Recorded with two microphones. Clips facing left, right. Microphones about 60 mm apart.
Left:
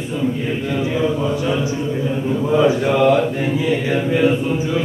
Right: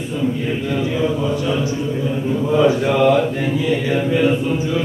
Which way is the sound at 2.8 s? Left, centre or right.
Centre.